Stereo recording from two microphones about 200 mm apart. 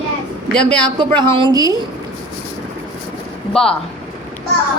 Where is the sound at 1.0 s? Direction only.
25° right (ahead or behind).